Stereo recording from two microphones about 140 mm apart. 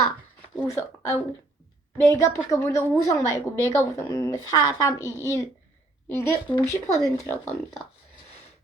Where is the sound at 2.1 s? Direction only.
20° left (ahead or behind).